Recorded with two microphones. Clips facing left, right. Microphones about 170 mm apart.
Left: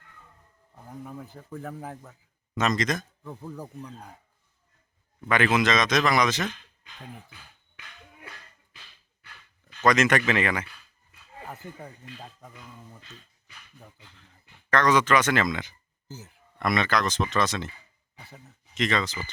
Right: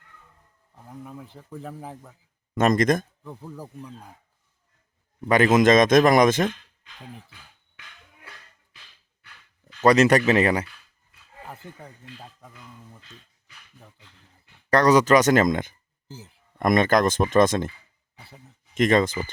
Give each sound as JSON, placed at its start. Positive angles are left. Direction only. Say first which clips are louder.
{"t": 1.4, "sound": "speech", "louder": "even", "side_deg": 0}
{"t": 2.6, "sound": "speech", "louder": "right 7 dB", "side_deg": -50}
{"t": 3.2, "sound": "speech", "louder": "even", "side_deg": -5}
{"t": 5.3, "sound": "speech", "louder": "right 7 dB", "side_deg": -40}
{"t": 9.8, "sound": "speech", "louder": "right 5 dB", "side_deg": -35}
{"t": 14.7, "sound": "speech", "louder": "right 5 dB", "side_deg": -40}
{"t": 16.0, "sound": "speech", "louder": "right 1 dB", "side_deg": -30}
{"t": 16.6, "sound": "speech", "louder": "right 6 dB", "side_deg": -45}
{"t": 18.7, "sound": "speech", "louder": "right 8 dB", "side_deg": -50}